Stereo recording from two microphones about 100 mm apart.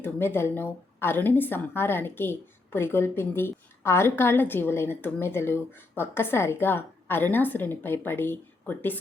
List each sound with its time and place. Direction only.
0.0 s a woman's voice: 20° left (ahead or behind)